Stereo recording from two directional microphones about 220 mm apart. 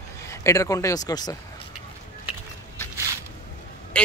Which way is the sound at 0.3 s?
15° left (ahead or behind).